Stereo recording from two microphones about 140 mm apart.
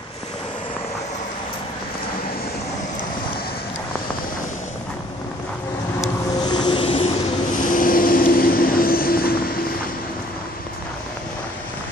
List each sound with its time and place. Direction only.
6.4 s vehicle: 30° left (ahead or behind)
7.5 s vehicle: 75° left (ahead or behind); by 9.8 s 90° left